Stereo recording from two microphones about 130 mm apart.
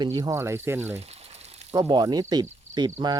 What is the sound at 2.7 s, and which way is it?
Cricket, 60° right (ahead or behind).